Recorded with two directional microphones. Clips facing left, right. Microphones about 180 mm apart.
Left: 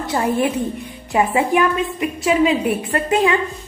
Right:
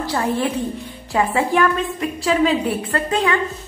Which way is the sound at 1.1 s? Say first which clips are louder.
Left 2 dB; 15° left (ahead or behind).